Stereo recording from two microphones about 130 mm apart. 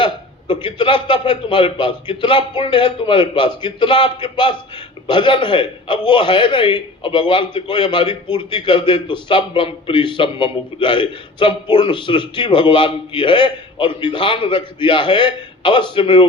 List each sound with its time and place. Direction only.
0.0 s a man's voice: 40° left (ahead or behind)